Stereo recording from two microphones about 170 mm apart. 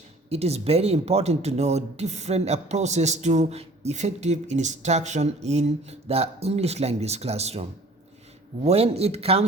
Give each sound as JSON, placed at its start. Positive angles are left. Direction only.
{"t": 0.3, "sound": "speech", "side_deg": -40}
{"t": 8.6, "sound": "speech", "side_deg": -35}